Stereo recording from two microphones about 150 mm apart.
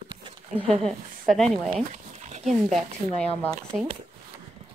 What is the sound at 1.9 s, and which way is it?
Dog, 50° right (ahead or behind).